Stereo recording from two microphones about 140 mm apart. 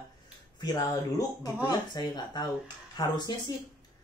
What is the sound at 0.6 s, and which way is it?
Speech, 25° left (ahead or behind).